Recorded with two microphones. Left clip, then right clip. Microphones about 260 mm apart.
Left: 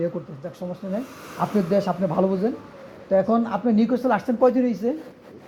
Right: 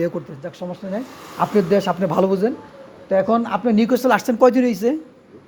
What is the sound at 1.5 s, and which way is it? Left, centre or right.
A man's voice, right.